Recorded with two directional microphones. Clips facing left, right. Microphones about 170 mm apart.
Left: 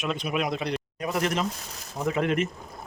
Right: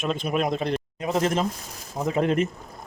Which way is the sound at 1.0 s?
25° right (ahead or behind).